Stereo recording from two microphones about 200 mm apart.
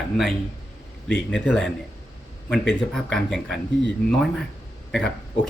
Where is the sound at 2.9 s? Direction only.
Centre (ahead or behind).